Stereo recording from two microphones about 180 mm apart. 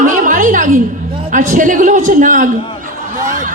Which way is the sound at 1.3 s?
45° right (ahead or behind).